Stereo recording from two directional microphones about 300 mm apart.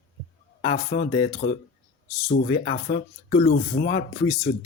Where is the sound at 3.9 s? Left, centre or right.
Left.